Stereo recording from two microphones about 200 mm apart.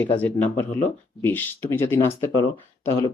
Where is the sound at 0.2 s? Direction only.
10° left (ahead or behind).